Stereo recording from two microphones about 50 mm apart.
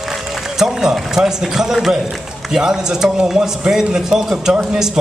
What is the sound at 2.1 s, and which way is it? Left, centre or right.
A man's voice, centre.